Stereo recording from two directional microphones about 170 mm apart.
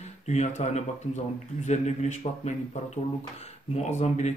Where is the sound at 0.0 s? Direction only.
40° left (ahead or behind).